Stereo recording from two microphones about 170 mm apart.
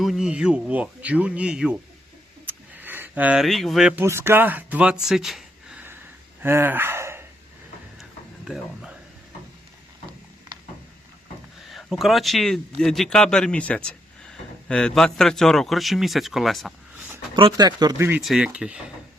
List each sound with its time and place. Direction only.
0.0 s speech: centre (ahead or behind)
2.5 s a sound: 10° right (ahead or behind)
4.0 s speech: 15° right (ahead or behind)
8.4 s a man's voice: 5° right (ahead or behind)
11.7 s a man's voice: centre (ahead or behind)
17.3 s speech: 25° right (ahead or behind)
18.2 s a man's voice: 5° right (ahead or behind)